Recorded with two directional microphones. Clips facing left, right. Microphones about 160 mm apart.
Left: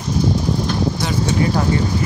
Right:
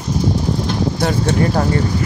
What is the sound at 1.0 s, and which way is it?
Speech, 60° right (ahead or behind).